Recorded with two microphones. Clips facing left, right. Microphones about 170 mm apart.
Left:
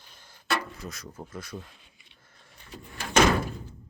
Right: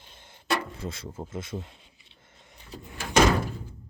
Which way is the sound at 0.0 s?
25° right (ahead or behind).